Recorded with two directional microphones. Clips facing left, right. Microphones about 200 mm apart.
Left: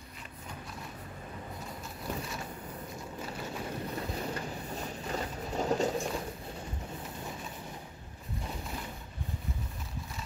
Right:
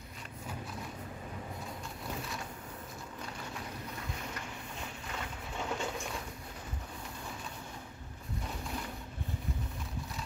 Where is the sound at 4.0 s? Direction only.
35° left (ahead or behind).